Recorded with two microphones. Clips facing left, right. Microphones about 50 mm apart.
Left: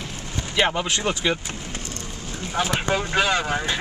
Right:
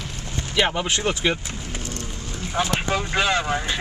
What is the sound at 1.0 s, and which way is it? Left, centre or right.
Speech, centre.